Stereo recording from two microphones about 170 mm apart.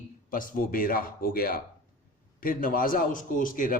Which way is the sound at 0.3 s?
55° left (ahead or behind).